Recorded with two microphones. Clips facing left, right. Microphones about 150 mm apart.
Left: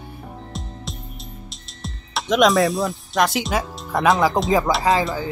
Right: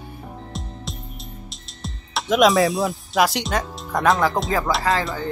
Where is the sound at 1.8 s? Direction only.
Centre (ahead or behind); by 4.7 s 15° left (ahead or behind).